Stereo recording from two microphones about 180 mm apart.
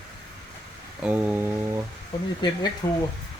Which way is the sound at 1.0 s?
10° right (ahead or behind).